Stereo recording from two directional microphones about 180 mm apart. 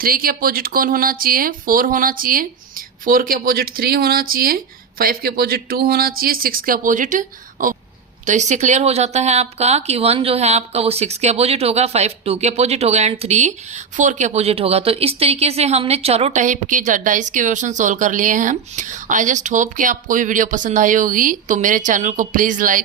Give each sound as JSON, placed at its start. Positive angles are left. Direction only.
{"t": 0.0, "sound": "speech", "side_deg": -55}